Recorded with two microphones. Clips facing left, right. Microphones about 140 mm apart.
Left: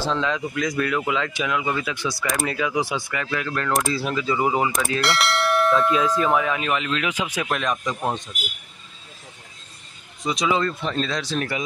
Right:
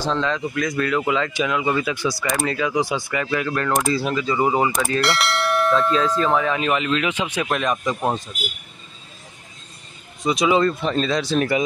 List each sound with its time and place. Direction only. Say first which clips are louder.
0.0 s speech: right 1 dB; 5° left (ahead or behind)
5.9 s speech: right 1 dB; 10° left (ahead or behind)
7.7 s speech: right 3 dB; 15° right (ahead or behind)
10.2 s speech: right 5 dB; 5° right (ahead or behind)